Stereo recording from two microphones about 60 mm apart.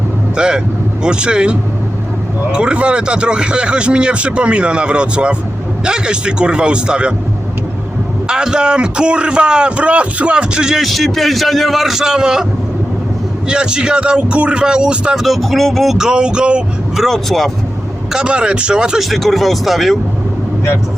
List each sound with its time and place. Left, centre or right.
0.3 s a man's voice: centre
8.3 s a man's voice: centre
13.5 s a man's voice: centre
15.2 s speech: centre
17.0 s speech: centre
18.1 s a man's voice: centre
19.1 s speech: centre